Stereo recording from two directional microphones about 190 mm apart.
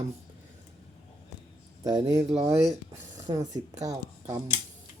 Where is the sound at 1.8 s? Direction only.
20° right (ahead or behind).